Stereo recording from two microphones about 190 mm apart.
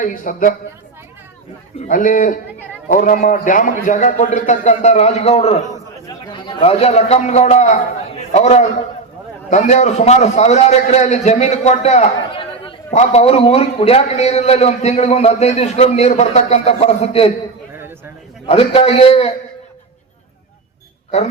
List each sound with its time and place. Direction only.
0.0 s a man's voice: 45° left (ahead or behind)
1.8 s a man's voice: 45° left (ahead or behind)
18.4 s a man's voice: 30° left (ahead or behind)